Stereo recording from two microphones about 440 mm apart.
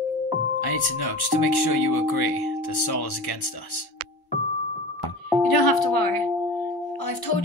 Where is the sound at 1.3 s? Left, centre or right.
Left.